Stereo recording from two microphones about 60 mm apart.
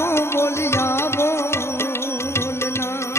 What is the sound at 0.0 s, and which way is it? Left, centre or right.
Music, left.